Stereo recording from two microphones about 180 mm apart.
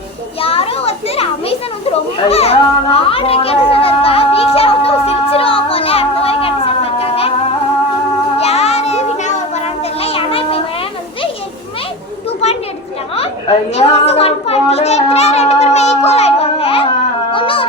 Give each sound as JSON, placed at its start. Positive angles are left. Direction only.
{"t": 0.4, "sound": "children playing", "side_deg": 30}
{"t": 7.0, "sound": "music", "side_deg": 35}
{"t": 8.4, "sound": "a sound", "side_deg": 35}
{"t": 10.0, "sound": "children playing", "side_deg": 30}
{"t": 13.7, "sound": "a sound", "side_deg": 35}
{"t": 17.3, "sound": "music", "side_deg": 30}